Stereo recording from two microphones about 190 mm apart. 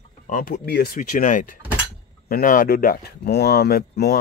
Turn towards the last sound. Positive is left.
turn(degrees=55)  # may be behind; listen again after turning